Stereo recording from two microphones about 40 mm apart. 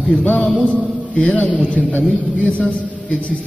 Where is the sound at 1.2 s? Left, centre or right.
Left.